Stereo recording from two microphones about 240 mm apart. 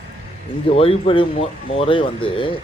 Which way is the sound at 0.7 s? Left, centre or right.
Left.